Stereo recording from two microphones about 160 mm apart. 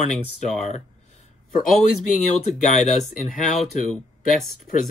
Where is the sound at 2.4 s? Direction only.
50° left (ahead or behind).